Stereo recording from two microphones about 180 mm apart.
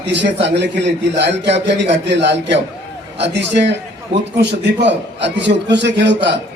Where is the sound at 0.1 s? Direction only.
75° right (ahead or behind).